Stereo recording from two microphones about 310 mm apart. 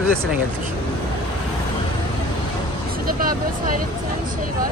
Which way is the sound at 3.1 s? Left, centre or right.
Right.